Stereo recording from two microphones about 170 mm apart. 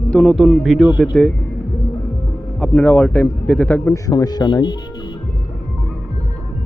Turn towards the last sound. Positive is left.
turn(degrees=25)  # may be behind; listen again after turning